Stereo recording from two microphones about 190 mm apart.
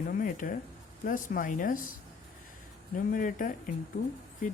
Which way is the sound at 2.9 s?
45° left (ahead or behind).